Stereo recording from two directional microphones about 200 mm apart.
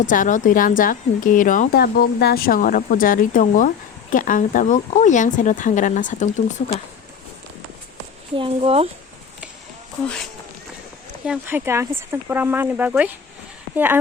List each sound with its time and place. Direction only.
0.0 s a woman's voice: 40° left (ahead or behind)
8.4 s speech: 30° right (ahead or behind)
11.3 s speech: 10° right (ahead or behind)